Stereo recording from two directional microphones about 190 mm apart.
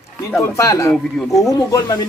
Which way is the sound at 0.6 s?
15° left (ahead or behind).